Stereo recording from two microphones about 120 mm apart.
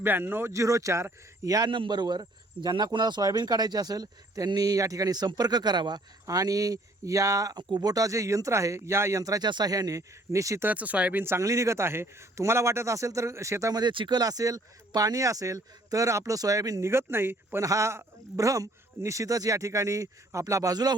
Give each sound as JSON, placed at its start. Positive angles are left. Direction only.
{"t": 0.0, "sound": "a man's voice", "side_deg": -15}
{"t": 10.7, "sound": "a man's voice", "side_deg": -10}